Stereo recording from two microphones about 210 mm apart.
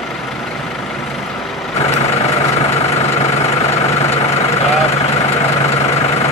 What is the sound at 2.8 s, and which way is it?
Vehicle, 30° left (ahead or behind).